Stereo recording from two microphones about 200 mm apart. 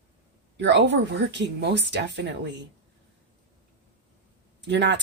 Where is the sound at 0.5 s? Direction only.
60° right (ahead or behind).